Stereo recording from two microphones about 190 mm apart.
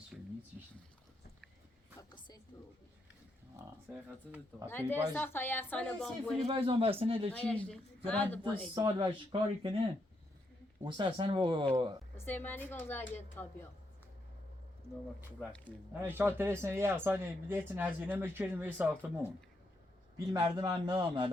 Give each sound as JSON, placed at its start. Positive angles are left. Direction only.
{"t": 0.1, "sound": "a sound", "side_deg": -5}
{"t": 2.0, "sound": "a sound", "side_deg": 25}
{"t": 3.8, "sound": "speech", "side_deg": -5}
{"t": 4.6, "sound": "a woman's voice", "side_deg": 10}
{"t": 6.4, "sound": "speech", "side_deg": -30}
{"t": 7.3, "sound": "a woman's voice", "side_deg": 5}
{"t": 8.7, "sound": "speech", "side_deg": -25}
{"t": 10.8, "sound": "speech", "side_deg": -25}
{"t": 12.1, "sound": "a woman's voice", "side_deg": 10}
{"t": 15.4, "sound": "speech", "side_deg": 5}
{"t": 16.0, "sound": "speech", "side_deg": -10}
{"t": 20.1, "sound": "speech", "side_deg": -20}